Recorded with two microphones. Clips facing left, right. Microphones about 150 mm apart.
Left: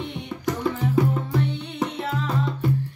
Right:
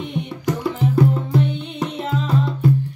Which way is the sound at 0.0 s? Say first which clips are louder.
Right 3 dB; 15° right (ahead or behind).